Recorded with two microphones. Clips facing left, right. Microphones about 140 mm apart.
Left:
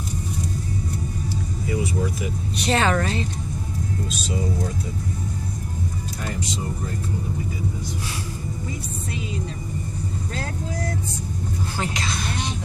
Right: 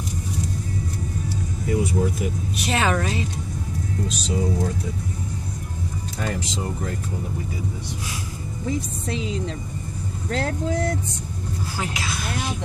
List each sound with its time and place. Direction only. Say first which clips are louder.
1.7 s speech: right 3 dB; 50° right (ahead or behind)
2.5 s a woman's voice: left 2 dB; 5° right (ahead or behind)
8.6 s speech: right 5 dB; 90° right
11.8 s music: left 1 dB; 5° right (ahead or behind)